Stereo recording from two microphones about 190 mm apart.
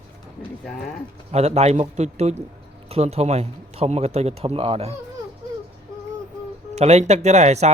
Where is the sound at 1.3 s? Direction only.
35° right (ahead or behind).